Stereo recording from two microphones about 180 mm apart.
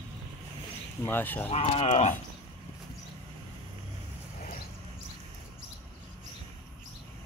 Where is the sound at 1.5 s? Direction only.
35° left (ahead or behind).